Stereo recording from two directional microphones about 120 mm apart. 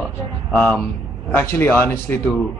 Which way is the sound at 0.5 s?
10° left (ahead or behind).